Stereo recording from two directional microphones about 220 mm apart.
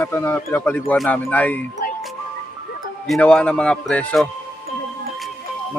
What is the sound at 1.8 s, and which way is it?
Music, 40° left (ahead or behind).